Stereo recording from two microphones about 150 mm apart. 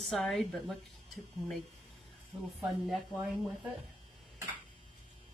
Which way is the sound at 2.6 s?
Centre (ahead or behind).